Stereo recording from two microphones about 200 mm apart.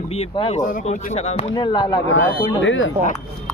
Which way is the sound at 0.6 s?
40° left (ahead or behind).